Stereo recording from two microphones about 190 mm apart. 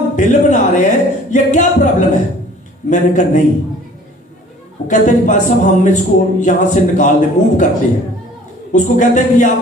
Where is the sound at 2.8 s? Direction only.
40° left (ahead or behind).